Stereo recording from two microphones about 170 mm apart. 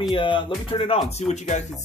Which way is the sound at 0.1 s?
30° left (ahead or behind).